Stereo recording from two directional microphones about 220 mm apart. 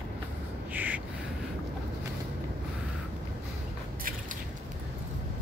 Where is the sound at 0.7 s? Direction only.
5° right (ahead or behind).